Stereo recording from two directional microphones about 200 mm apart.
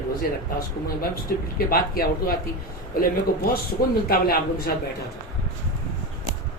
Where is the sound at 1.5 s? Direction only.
50° left (ahead or behind).